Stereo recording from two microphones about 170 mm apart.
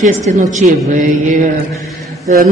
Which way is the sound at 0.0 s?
45° right (ahead or behind).